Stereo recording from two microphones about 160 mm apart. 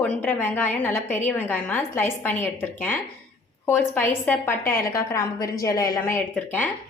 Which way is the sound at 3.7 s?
10° left (ahead or behind).